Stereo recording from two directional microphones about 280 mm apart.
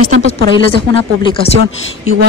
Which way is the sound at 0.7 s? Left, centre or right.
Centre.